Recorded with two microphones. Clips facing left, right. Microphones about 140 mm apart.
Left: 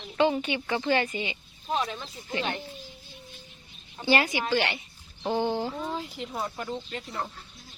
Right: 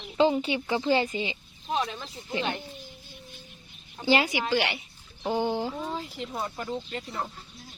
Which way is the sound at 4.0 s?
10° right (ahead or behind).